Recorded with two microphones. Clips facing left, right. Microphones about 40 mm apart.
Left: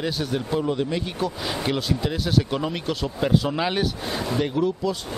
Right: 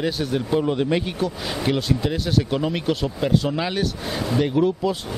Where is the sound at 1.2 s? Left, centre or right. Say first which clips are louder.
Right 2 dB; centre.